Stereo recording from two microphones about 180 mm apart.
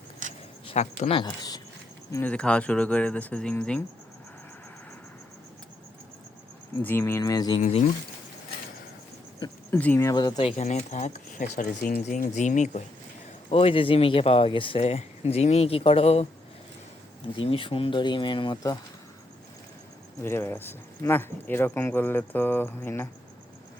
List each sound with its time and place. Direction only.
0.2 s a sound: 45° right (ahead or behind)
0.7 s speech: 35° left (ahead or behind)
2.1 s speech: 5° left (ahead or behind)
6.8 s speech: 10° left (ahead or behind)
7.6 s speech: 40° left (ahead or behind)
9.7 s speech: 10° left (ahead or behind)
10.6 s speech: 40° left (ahead or behind)
13.5 s speech: 30° left (ahead or behind)
17.3 s speech: 30° left (ahead or behind)
20.2 s speech: 15° left (ahead or behind)